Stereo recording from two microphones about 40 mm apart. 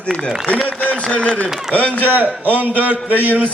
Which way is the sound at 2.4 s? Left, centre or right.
Right.